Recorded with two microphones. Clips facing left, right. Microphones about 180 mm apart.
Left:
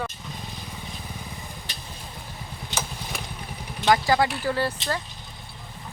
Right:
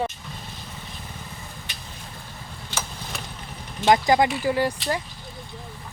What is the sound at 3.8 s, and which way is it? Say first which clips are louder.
Speech: right 2 dB; 20° right (ahead or behind).